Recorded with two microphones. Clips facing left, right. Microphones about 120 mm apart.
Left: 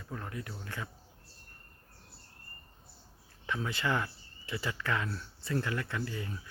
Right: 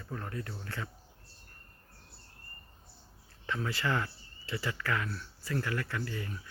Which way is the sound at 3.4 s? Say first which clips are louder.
Even; 15° left (ahead or behind).